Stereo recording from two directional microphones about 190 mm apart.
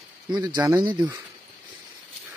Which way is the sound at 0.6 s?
15° right (ahead or behind).